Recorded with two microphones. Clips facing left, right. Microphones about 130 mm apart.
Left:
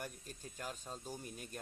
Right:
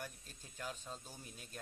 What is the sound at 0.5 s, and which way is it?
Speech, 45° left (ahead or behind).